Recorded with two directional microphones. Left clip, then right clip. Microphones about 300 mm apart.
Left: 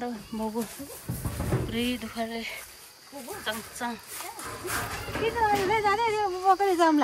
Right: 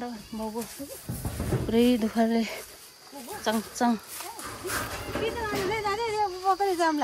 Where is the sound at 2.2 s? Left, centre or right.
Right.